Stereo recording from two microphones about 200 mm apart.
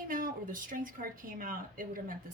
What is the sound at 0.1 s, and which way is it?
Speech, 45° right (ahead or behind).